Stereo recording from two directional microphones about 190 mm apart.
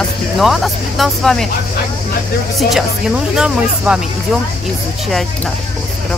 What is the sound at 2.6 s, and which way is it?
Speech, centre (ahead or behind).